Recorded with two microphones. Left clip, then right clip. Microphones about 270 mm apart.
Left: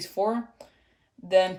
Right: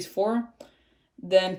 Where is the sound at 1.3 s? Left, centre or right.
Left.